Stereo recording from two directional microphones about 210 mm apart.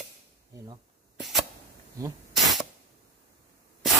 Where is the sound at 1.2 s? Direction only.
Centre (ahead or behind).